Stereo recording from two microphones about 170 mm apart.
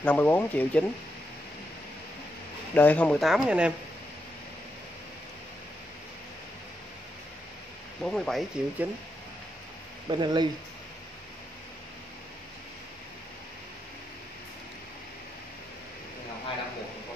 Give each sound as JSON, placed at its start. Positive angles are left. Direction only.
{"t": 0.0, "sound": "speech", "side_deg": 10}
{"t": 2.7, "sound": "speech", "side_deg": 10}
{"t": 8.0, "sound": "speech", "side_deg": 5}
{"t": 10.0, "sound": "speech", "side_deg": -25}